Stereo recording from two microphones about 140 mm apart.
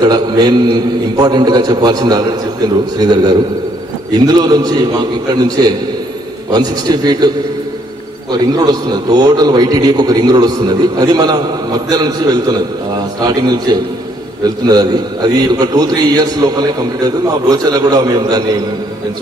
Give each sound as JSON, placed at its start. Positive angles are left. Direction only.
{"t": 0.0, "sound": "a man's voice", "side_deg": -30}
{"t": 4.4, "sound": "a man's voice", "side_deg": -25}
{"t": 8.3, "sound": "a man's voice", "side_deg": -30}